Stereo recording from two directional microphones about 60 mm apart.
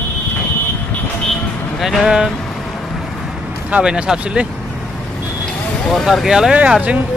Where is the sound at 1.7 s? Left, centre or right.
Centre.